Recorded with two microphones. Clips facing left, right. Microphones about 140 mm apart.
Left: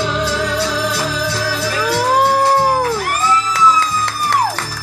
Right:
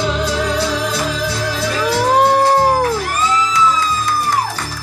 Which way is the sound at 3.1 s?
65° left (ahead or behind).